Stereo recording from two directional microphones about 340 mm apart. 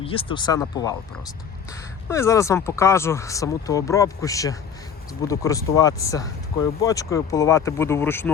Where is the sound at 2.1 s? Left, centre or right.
Centre.